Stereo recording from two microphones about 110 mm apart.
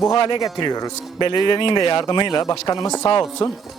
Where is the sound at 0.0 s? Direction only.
45° left (ahead or behind).